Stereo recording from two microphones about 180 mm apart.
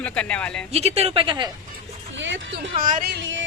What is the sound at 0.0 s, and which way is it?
Speech, 5° left (ahead or behind).